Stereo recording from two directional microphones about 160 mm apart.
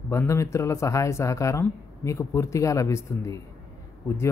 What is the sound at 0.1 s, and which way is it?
Speech, 20° left (ahead or behind).